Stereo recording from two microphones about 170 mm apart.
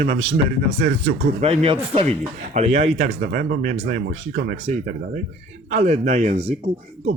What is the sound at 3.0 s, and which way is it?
Speech, 60° right (ahead or behind).